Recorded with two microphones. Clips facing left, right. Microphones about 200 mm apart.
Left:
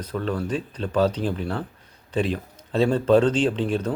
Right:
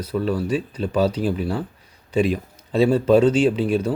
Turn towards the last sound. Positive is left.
turn(degrees=-10)  # may be behind; listen again after turning